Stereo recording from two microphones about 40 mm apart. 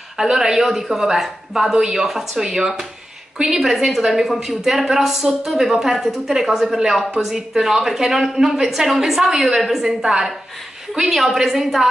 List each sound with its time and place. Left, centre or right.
0.2 s a woman's voice: centre